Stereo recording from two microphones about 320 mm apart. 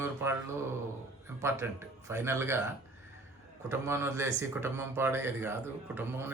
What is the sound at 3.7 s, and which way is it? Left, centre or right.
Speech, centre.